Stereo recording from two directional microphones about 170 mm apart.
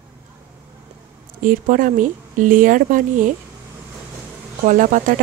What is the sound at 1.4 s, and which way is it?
Speech, 50° right (ahead or behind).